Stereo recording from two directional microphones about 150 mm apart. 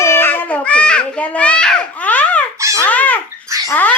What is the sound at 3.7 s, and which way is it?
Dog, 10° left (ahead or behind).